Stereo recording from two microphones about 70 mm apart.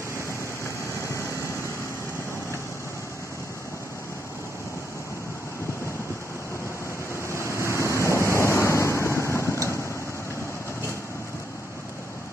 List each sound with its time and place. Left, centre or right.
7.2 s waves: left